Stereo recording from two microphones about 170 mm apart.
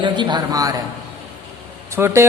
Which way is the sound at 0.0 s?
25° right (ahead or behind).